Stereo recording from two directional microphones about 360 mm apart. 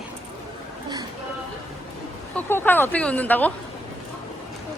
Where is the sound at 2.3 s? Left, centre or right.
Centre.